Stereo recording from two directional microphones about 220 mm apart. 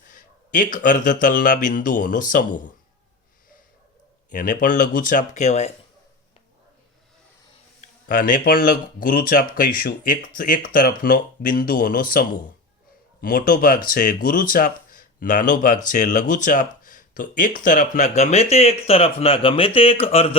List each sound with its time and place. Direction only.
0.1 s speech: 35° left (ahead or behind)
4.3 s speech: 35° left (ahead or behind)
7.8 s speech: 40° left (ahead or behind)
13.2 s speech: 40° left (ahead or behind)